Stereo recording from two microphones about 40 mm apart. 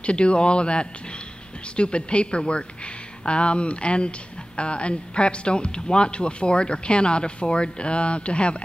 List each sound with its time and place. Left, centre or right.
0.0 s speech: left